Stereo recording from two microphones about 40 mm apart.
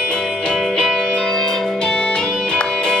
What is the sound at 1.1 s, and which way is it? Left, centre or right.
Organ, centre.